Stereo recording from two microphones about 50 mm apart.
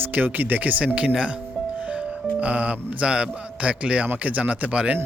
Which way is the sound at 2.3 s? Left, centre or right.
Right.